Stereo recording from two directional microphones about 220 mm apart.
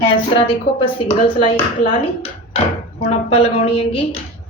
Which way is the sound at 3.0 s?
25° left (ahead or behind).